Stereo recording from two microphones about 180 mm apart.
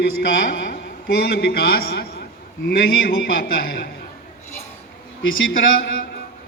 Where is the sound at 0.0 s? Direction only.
55° left (ahead or behind).